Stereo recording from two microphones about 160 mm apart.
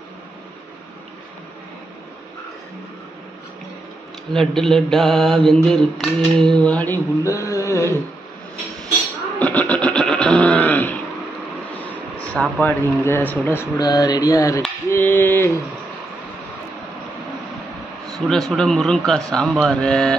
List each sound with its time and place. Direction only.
4.3 s mantra: 5° left (ahead or behind); by 7.9 s 20° left (ahead or behind)
9.4 s grunt: 10° left (ahead or behind)
11.7 s vehicle: 10° left (ahead or behind)
12.4 s speech: 10° left (ahead or behind)
13.7 s a sound: 25° left (ahead or behind)
14.9 s speech: 15° left (ahead or behind)
18.1 s mantra: centre (ahead or behind)